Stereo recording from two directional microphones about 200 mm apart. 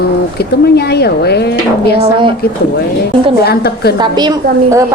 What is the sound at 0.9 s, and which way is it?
Speech, 55° left (ahead or behind).